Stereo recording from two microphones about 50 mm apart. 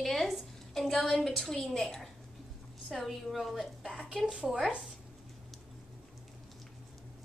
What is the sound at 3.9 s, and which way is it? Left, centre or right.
Speech, centre.